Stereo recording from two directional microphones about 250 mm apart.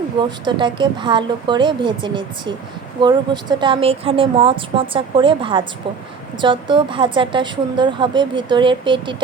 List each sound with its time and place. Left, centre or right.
0.2 s speech: centre